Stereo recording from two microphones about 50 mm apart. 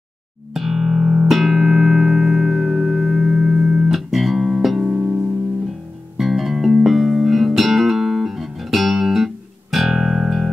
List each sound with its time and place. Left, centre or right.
0.6 s music: centre
4.9 s music: right
6.1 s music: centre